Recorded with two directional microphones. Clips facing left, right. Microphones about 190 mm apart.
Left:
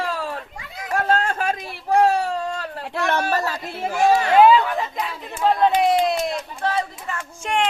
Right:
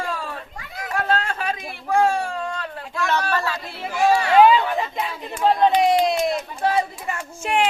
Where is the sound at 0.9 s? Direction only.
45° left (ahead or behind).